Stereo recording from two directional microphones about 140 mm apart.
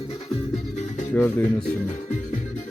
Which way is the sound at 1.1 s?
15° left (ahead or behind).